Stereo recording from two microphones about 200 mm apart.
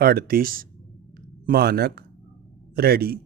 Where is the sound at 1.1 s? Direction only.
50° right (ahead or behind).